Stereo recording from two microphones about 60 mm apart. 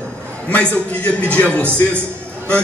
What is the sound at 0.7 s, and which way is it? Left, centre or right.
A man's voice, left.